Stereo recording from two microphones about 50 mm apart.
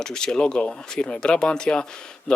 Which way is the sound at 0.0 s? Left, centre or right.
Centre.